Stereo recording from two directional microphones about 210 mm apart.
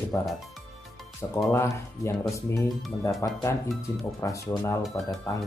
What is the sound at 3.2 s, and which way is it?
Speech, 15° left (ahead or behind).